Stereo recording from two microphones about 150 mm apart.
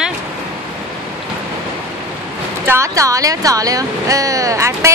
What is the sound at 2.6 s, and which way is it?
Speech, 20° right (ahead or behind).